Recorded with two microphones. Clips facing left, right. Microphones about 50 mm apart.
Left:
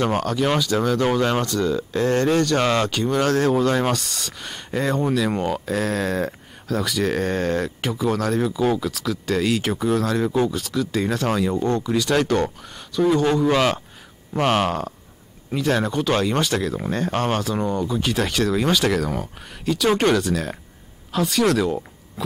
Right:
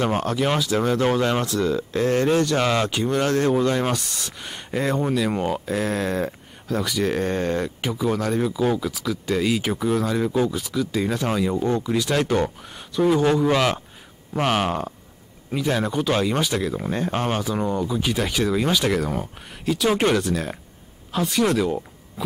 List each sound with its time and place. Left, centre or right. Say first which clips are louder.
0.1 s speech: left 1 dB; right; by 14.7 s centre
14.7 s speech: even; centre